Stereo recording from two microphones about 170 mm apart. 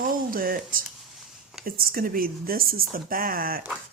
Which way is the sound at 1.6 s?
60° right (ahead or behind).